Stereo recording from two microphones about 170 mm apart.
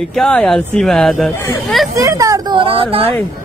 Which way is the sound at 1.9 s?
20° right (ahead or behind).